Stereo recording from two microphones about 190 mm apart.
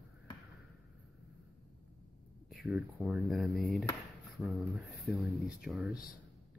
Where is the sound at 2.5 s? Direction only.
Centre (ahead or behind).